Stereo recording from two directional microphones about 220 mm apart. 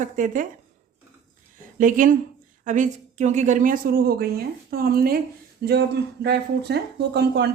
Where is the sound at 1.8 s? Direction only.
35° right (ahead or behind).